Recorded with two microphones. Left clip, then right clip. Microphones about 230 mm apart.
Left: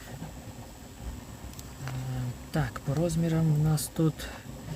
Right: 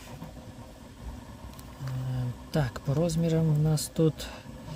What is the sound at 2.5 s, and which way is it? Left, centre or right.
Speech, centre.